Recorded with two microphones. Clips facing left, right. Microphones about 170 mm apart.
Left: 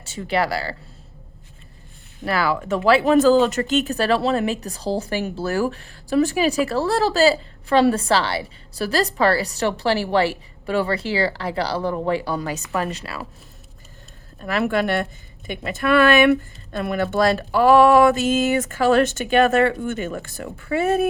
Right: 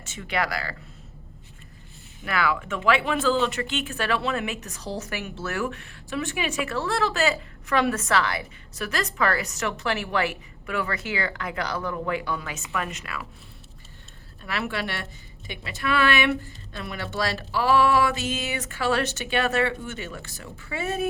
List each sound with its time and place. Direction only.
0.0 s speech: 35° left (ahead or behind)
2.2 s speech: 35° left (ahead or behind)
14.4 s a woman's voice: 45° left (ahead or behind)